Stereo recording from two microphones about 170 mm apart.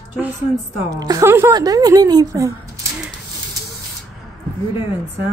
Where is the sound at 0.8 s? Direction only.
20° right (ahead or behind).